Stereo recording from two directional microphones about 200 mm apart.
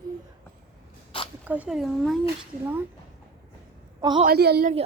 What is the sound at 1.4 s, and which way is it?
Speech, 5° right (ahead or behind).